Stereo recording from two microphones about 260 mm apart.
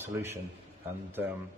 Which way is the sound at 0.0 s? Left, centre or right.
Centre.